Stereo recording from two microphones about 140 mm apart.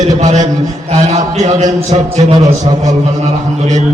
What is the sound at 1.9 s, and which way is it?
A man's voice, 40° right (ahead or behind).